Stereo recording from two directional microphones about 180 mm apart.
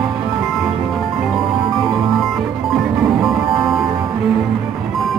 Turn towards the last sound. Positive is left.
turn(degrees=0)  # may be behind; listen again after turning